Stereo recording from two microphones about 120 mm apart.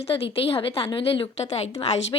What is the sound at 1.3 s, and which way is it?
Speech, 65° left (ahead or behind).